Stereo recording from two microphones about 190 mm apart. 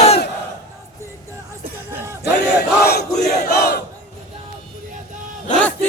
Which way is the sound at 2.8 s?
55° left (ahead or behind).